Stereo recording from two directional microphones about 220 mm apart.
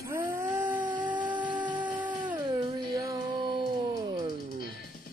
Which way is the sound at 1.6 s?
5° right (ahead or behind).